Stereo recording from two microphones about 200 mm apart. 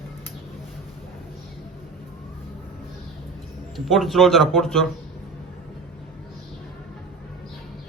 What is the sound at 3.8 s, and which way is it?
A man's voice, centre (ahead or behind).